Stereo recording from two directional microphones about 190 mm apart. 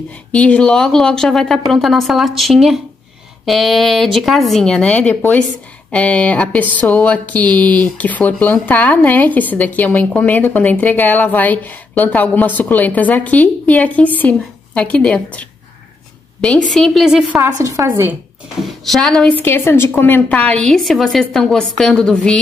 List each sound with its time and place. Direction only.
0.3 s a woman's voice: 5° left (ahead or behind)
17.5 s a woman's voice: 15° right (ahead or behind)
18.7 s a woman's voice: centre (ahead or behind)